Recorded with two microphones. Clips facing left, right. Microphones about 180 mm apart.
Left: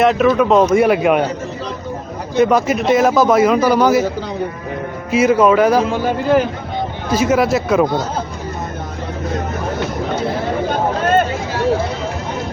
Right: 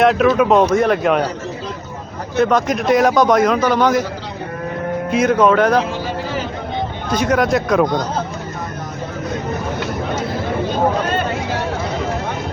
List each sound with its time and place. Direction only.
0.0 s a man's voice: centre (ahead or behind)
0.7 s speech: 10° left (ahead or behind)
2.3 s a man's voice: 10° left (ahead or behind)
5.1 s a man's voice: 5° left (ahead or behind)
5.8 s a man's voice: 50° left (ahead or behind)
7.1 s a man's voice: 5° left (ahead or behind)